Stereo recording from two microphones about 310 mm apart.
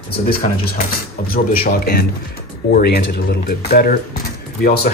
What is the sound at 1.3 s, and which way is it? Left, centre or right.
Speech, left.